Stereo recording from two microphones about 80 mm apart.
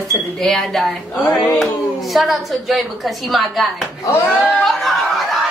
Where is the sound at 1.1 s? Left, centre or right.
Left.